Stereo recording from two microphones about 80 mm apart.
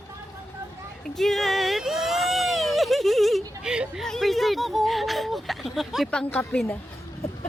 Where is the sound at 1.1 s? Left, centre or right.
Centre.